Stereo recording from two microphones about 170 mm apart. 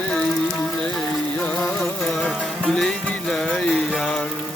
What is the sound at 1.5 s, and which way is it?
Music, 5° left (ahead or behind).